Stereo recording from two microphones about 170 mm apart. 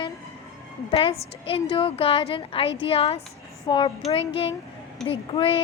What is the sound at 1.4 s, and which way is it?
Speech, 35° left (ahead or behind).